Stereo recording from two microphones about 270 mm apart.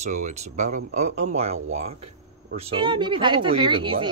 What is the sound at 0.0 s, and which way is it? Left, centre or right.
Speech, right.